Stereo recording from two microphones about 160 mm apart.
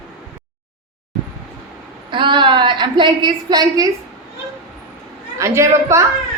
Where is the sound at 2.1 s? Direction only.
30° right (ahead or behind).